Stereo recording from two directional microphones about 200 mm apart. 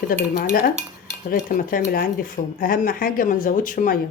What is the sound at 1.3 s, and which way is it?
Speech, 45° left (ahead or behind).